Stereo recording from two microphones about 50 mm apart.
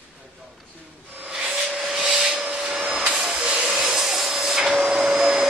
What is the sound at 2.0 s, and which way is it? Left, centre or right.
Rub, centre.